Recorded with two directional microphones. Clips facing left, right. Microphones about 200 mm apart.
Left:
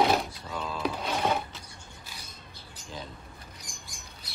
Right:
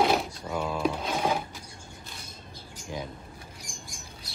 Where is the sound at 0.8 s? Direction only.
5° right (ahead or behind).